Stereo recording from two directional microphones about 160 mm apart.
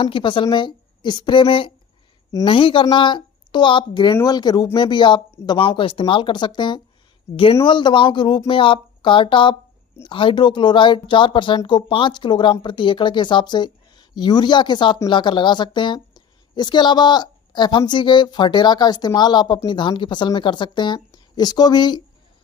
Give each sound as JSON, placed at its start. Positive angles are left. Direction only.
{"t": 0.0, "sound": "a woman's voice", "side_deg": 30}
{"t": 5.3, "sound": "speech", "side_deg": 20}
{"t": 5.5, "sound": "a woman's voice", "side_deg": 30}